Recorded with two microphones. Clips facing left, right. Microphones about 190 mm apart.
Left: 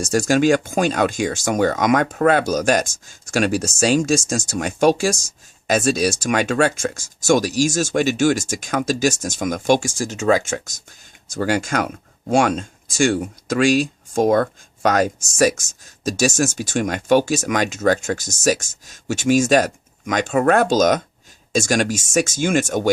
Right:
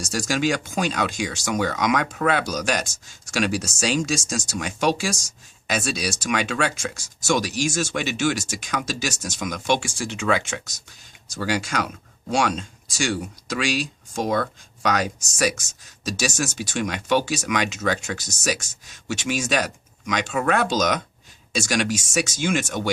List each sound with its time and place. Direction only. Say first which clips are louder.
0.0 s speech: left 7 dB; 50° left (ahead or behind)